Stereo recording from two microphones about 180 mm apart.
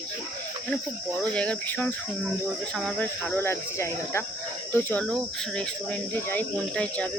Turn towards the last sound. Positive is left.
turn(degrees=5)  # may be behind; listen again after turning